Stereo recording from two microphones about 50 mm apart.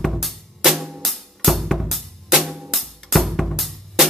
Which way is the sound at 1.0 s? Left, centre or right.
Centre.